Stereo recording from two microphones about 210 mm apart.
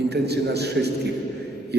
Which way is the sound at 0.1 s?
50° right (ahead or behind).